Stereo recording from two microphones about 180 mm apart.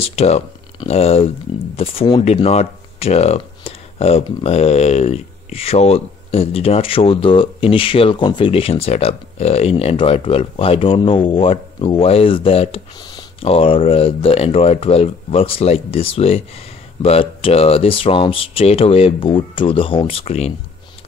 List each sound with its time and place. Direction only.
0.0 s speech: 35° left (ahead or behind)